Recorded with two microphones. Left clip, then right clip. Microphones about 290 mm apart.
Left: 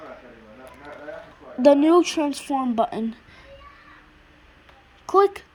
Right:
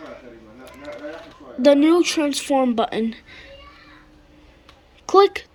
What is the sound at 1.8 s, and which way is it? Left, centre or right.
Speech, centre.